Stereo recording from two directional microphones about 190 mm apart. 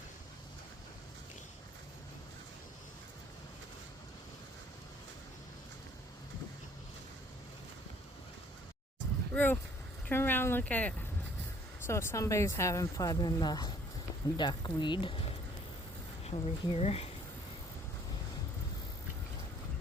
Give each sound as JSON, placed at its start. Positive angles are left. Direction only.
{"t": 9.3, "sound": "speech", "side_deg": 10}
{"t": 16.2, "sound": "speech", "side_deg": 30}